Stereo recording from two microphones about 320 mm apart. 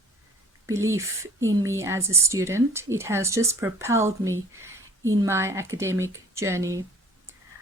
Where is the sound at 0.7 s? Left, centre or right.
Centre.